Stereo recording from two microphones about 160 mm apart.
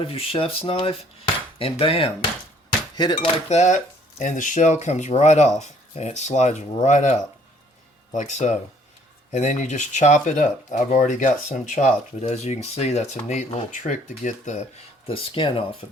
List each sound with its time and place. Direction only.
0.0 s cutlery: 35° left (ahead or behind)
4.2 s speech: 55° left (ahead or behind)
15.0 s cutlery: 35° left (ahead or behind)